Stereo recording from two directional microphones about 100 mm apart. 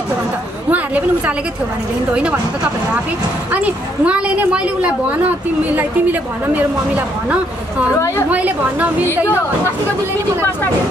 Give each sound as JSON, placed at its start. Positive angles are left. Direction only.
{"t": 0.7, "sound": "a woman's voice", "side_deg": -15}
{"t": 3.5, "sound": "a woman's voice", "side_deg": -15}
{"t": 6.5, "sound": "a woman's voice", "side_deg": -15}